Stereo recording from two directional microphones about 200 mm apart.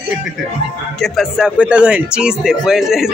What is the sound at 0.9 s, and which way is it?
Speech, centre (ahead or behind).